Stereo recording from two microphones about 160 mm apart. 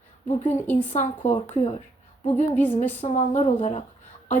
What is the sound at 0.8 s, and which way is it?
Speech, 45° left (ahead or behind).